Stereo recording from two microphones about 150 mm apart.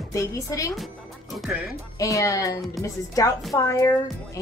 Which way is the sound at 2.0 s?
20° left (ahead or behind).